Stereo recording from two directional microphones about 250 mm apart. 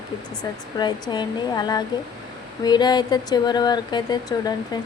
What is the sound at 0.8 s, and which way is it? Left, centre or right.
Speech, centre.